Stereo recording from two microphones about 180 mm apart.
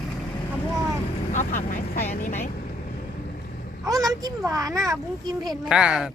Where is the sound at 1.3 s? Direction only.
50° left (ahead or behind).